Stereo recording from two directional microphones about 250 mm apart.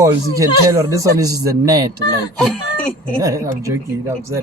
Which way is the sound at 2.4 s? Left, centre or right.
Centre.